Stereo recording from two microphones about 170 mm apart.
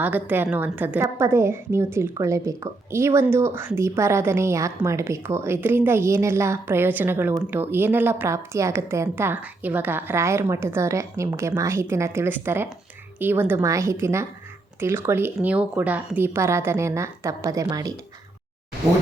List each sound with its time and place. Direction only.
0.0 s a woman's voice: 10° right (ahead or behind)